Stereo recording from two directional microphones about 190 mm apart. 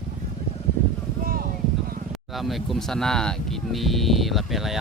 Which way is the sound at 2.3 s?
Centre (ahead or behind).